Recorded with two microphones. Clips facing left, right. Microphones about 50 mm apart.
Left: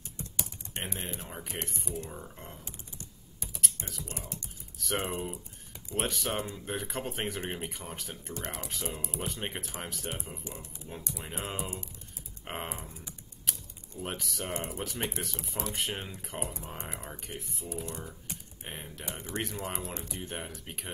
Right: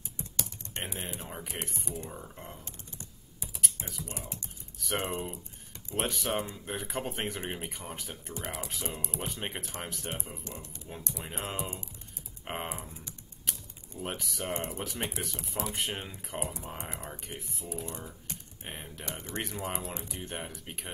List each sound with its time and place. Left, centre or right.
0.8 s speech: centre
3.0 s typing: centre
3.7 s speech: centre
10.4 s speech: centre
11.1 s speech: centre
14.0 s speech: centre
18.3 s computer keyboard: centre
19.4 s speech: centre